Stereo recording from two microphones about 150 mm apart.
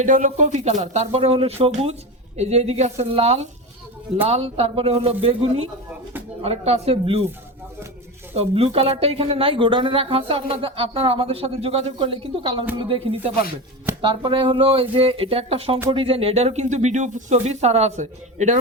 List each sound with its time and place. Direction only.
0.0 s speech: 55° right (ahead or behind); by 7.3 s 40° right (ahead or behind)
8.3 s speech: 40° right (ahead or behind)